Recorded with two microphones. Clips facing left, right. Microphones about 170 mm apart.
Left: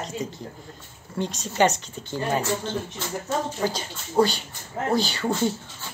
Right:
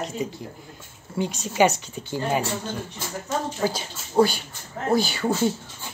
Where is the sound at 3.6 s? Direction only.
5° right (ahead or behind).